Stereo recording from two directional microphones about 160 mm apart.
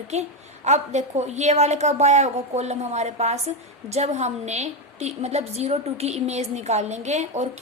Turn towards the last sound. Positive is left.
turn(degrees=-45)  # may be behind; listen again after turning